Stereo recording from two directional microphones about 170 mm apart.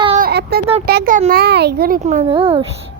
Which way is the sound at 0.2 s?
70° right (ahead or behind).